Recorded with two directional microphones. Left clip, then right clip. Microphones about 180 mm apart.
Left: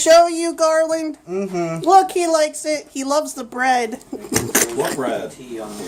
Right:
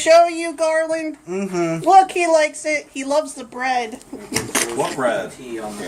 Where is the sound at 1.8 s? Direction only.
25° left (ahead or behind); by 5.0 s 55° left (ahead or behind).